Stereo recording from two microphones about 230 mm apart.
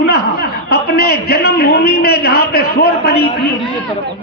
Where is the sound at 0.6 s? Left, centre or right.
Left.